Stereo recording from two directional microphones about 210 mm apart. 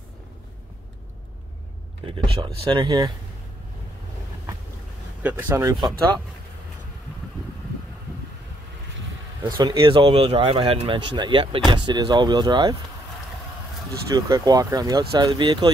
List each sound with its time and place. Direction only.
2.0 s speech: 25° right (ahead or behind)
5.2 s speech: 10° right (ahead or behind)
9.6 s speech: 20° right (ahead or behind)
14.0 s speech: 15° right (ahead or behind)